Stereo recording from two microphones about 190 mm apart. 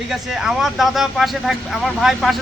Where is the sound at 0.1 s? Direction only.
Centre (ahead or behind).